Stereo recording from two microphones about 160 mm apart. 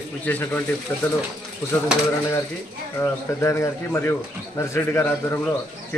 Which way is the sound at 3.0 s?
15° left (ahead or behind).